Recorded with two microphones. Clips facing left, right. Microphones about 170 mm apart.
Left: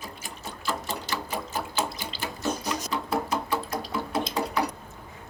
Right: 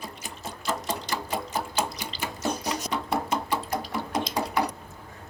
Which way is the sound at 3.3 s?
15° right (ahead or behind).